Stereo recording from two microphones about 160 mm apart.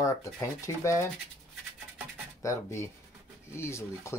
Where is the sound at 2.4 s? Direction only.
20° left (ahead or behind).